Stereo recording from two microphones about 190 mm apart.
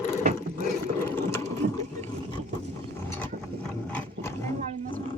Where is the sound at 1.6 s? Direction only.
60° right (ahead or behind).